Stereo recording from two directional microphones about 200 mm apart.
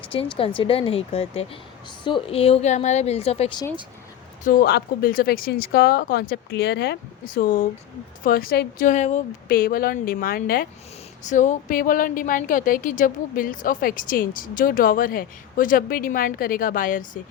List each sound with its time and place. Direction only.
0.1 s a woman's voice: 25° left (ahead or behind)
4.4 s a woman's voice: 50° left (ahead or behind)
9.5 s a woman's voice: 45° left (ahead or behind)